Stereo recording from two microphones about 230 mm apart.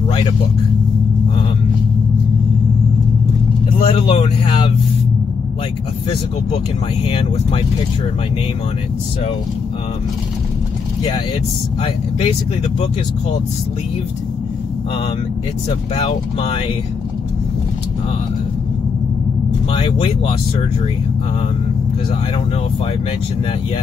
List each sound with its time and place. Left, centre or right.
3.8 s speech: left
7.1 s speech: left
11.8 s speech: left
16.0 s speech: left
19.7 s speech: left